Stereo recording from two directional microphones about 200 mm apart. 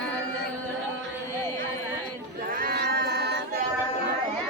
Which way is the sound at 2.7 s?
55° right (ahead or behind).